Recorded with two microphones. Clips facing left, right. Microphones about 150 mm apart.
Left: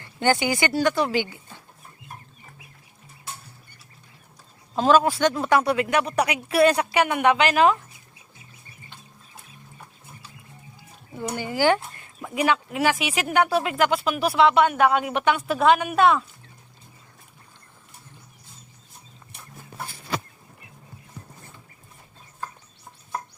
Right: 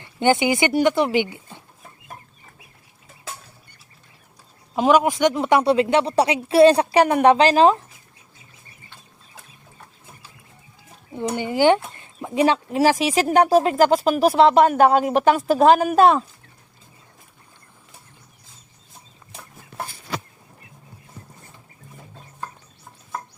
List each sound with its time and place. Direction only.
0.0 s speech: 20° right (ahead or behind)
3.3 s cutlery: 90° right
4.7 s speech: 15° right (ahead or behind); by 7.8 s 30° right (ahead or behind)
11.3 s speech: 20° right (ahead or behind); by 16.2 s 35° right (ahead or behind)